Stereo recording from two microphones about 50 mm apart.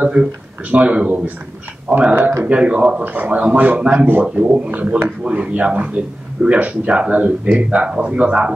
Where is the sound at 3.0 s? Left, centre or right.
Right.